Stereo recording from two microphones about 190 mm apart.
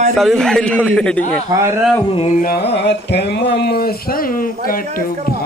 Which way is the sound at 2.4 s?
60° left (ahead or behind).